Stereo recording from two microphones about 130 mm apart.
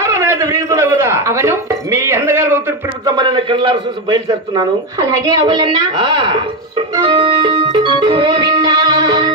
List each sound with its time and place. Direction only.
0.0 s a man's voice: 20° right (ahead or behind)
3.1 s a man's voice: 35° right (ahead or behind)
7.1 s music: 35° right (ahead or behind)